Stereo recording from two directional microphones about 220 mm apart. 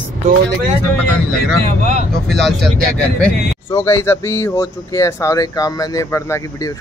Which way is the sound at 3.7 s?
10° left (ahead or behind).